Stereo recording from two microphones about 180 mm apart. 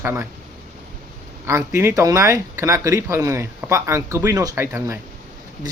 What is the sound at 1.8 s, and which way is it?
Speech, 15° right (ahead or behind).